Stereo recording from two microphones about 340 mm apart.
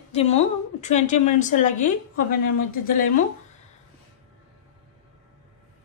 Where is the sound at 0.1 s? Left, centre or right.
Centre.